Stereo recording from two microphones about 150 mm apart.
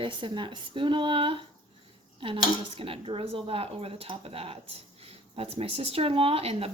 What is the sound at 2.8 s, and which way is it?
Speech, 35° right (ahead or behind).